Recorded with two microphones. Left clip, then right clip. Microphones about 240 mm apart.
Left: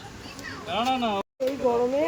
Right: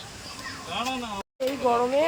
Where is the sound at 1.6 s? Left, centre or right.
Centre.